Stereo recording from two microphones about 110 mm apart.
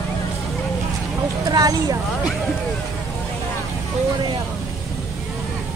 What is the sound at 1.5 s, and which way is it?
Speech, 35° right (ahead or behind).